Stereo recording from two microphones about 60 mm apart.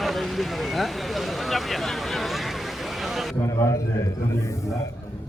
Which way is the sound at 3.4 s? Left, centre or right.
Left.